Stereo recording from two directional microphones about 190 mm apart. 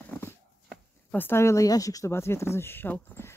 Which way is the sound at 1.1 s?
10° left (ahead or behind).